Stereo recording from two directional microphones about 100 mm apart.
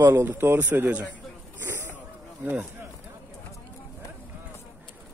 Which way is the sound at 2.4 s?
20° right (ahead or behind).